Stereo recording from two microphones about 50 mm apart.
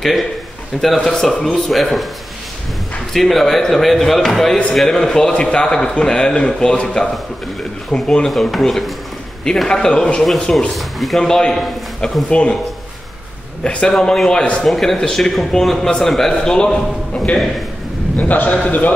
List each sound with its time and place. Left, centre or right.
0.7 s a man's voice: centre
3.1 s a man's voice: centre
8.3 s a man's voice: centre
9.7 s a man's voice: centre
10.2 s a man's voice: centre
11.1 s a man's voice: centre
13.7 s a man's voice: left
14.7 s a man's voice: centre
18.1 s a man's voice: left